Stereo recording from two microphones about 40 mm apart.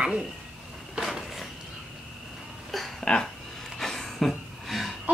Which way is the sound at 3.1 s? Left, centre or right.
Left.